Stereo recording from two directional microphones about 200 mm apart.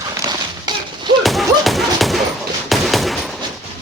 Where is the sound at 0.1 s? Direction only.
20° right (ahead or behind).